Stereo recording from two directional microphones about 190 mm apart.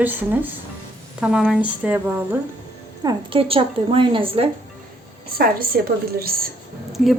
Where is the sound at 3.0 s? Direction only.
30° right (ahead or behind).